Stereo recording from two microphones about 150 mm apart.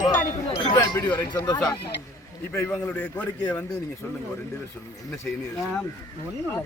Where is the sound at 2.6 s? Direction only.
10° left (ahead or behind).